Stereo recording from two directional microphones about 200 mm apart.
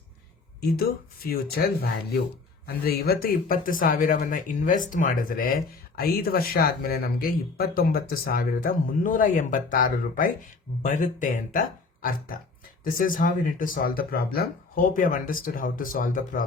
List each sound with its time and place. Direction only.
1.3 s speech: 50° left (ahead or behind)